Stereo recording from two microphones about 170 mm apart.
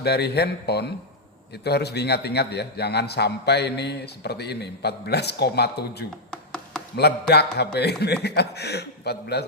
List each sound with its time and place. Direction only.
0.0 s a man's voice: 75° left (ahead or behind)
6.3 s chopping: 5° left (ahead or behind)
6.9 s a man's voice: 75° left (ahead or behind)